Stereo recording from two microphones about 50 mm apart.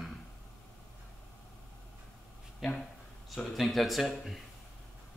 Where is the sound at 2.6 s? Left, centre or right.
Centre.